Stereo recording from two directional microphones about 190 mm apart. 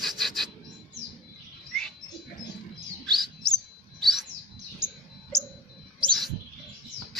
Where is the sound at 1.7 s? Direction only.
5° left (ahead or behind).